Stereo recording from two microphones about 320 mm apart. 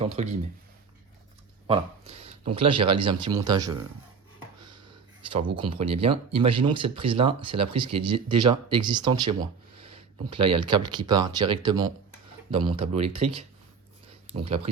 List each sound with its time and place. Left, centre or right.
0.0 s speech: centre
1.6 s speech: centre
5.3 s speech: centre
10.3 s speech: right
10.8 s speech: centre
14.4 s speech: centre